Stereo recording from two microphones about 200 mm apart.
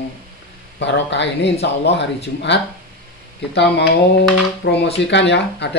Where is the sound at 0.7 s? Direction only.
65° left (ahead or behind).